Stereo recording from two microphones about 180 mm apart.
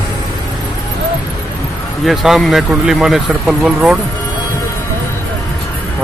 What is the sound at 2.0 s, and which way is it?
Speech, centre (ahead or behind).